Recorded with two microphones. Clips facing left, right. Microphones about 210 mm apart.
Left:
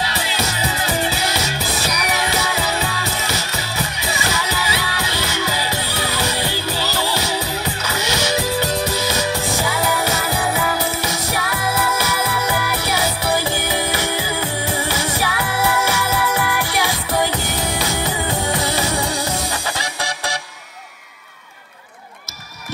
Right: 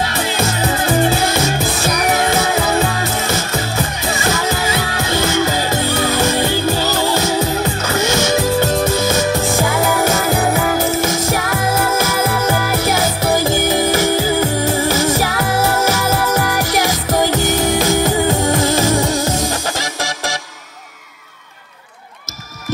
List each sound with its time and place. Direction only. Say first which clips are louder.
0.0 s music: right 5 dB; 50° right (ahead or behind)